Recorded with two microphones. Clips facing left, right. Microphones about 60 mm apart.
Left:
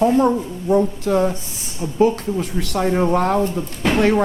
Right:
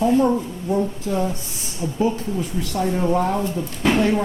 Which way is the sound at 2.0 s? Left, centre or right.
Left.